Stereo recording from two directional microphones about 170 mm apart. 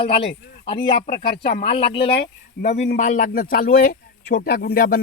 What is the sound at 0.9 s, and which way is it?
Speech, 60° left (ahead or behind).